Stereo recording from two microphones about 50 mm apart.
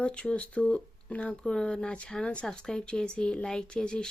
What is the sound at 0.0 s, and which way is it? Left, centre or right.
Speech, left.